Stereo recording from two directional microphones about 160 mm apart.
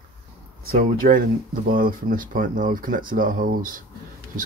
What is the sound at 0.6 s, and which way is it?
Speech, 65° right (ahead or behind).